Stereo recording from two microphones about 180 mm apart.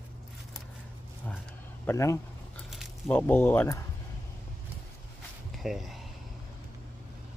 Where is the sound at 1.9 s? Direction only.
15° left (ahead or behind).